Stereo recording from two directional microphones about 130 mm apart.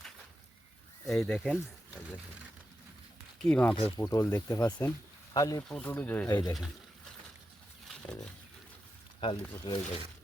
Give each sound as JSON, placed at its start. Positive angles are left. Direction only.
{"t": 1.1, "sound": "speech", "side_deg": 0}
{"t": 3.4, "sound": "speech", "side_deg": 10}
{"t": 3.9, "sound": "speech", "side_deg": 25}
{"t": 5.6, "sound": "speech", "side_deg": 5}
{"t": 6.2, "sound": "speech", "side_deg": 30}
{"t": 7.9, "sound": "a sound", "side_deg": 5}
{"t": 9.2, "sound": "speech", "side_deg": 45}